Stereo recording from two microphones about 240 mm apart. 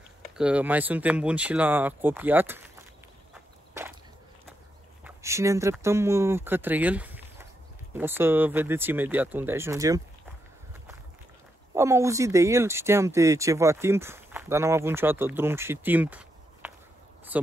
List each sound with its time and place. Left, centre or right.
0.4 s speech: centre
5.0 s speech: centre
11.7 s speech: centre